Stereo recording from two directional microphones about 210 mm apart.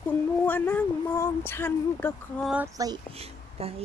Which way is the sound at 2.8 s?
30° right (ahead or behind).